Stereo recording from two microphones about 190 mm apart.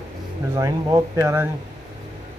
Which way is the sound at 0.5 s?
15° right (ahead or behind).